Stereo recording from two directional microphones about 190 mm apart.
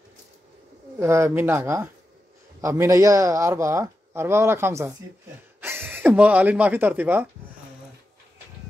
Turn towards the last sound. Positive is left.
turn(degrees=-10)  # may be behind; listen again after turning